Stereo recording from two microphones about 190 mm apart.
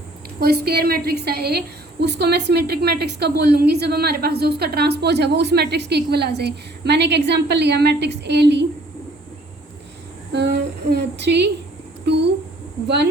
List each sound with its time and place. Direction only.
0.3 s a woman's voice: 55° right (ahead or behind)
10.3 s a woman's voice: 65° right (ahead or behind)
12.0 s a sound: 65° right (ahead or behind)